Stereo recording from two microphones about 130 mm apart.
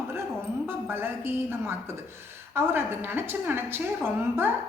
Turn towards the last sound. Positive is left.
turn(degrees=-20)  # may be behind; listen again after turning